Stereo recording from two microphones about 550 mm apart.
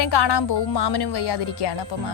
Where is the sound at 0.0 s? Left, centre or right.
Left.